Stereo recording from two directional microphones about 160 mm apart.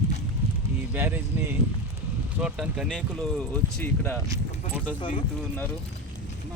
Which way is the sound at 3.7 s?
10° left (ahead or behind).